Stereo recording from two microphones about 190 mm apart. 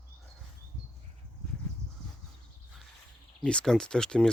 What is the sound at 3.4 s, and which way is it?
Speech, 5° left (ahead or behind).